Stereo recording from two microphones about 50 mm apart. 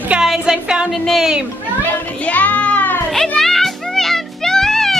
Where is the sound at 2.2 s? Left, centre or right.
Left.